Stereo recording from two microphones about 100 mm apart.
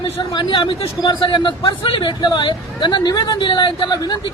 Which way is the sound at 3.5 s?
50° left (ahead or behind).